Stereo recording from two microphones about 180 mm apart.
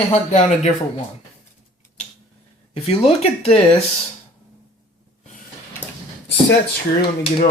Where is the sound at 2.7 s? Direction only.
30° left (ahead or behind).